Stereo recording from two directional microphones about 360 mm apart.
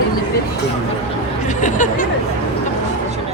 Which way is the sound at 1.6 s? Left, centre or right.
Left.